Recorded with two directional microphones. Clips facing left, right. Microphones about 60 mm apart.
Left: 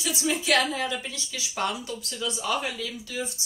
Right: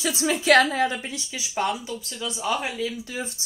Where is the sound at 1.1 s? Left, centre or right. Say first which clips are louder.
Right 3 dB; centre.